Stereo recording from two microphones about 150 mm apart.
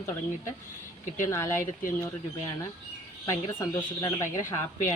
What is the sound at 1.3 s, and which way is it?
Speech, 20° left (ahead or behind).